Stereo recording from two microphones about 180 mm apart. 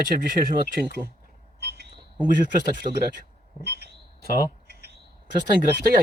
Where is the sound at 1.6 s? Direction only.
65° right (ahead or behind).